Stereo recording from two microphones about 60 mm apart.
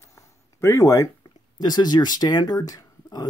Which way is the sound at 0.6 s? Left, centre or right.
Left.